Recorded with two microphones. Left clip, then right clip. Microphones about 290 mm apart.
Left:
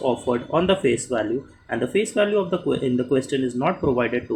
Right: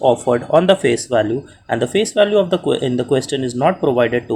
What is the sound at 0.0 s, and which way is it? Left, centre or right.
Speech, right.